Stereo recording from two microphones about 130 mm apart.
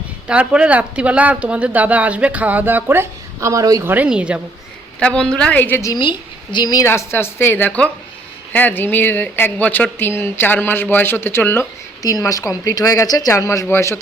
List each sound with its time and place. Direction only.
0.3 s speech: 10° right (ahead or behind); by 3.9 s 25° right (ahead or behind)
3.9 s speech: 10° right (ahead or behind)
4.9 s speech: 5° left (ahead or behind)
5.9 s a woman's voice: 35° left (ahead or behind)
6.8 s speech: 20° left (ahead or behind)